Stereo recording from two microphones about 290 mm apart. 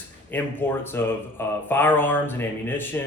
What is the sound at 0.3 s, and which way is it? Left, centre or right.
Speech, centre.